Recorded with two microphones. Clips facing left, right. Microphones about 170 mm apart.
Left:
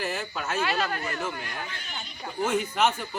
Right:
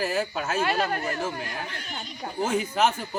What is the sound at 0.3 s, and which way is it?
Speech, 50° right (ahead or behind).